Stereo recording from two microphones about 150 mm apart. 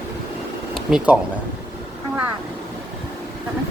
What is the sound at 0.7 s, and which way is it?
Speech, 5° right (ahead or behind).